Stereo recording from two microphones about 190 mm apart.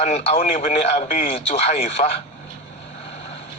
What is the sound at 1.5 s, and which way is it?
Speech, 35° left (ahead or behind).